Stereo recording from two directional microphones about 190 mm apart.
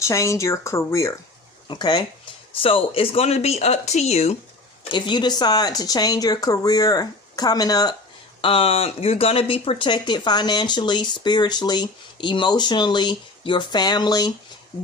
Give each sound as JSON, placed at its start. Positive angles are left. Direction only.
{"t": 0.0, "sound": "speech", "side_deg": 15}
{"t": 4.9, "sound": "speech", "side_deg": 25}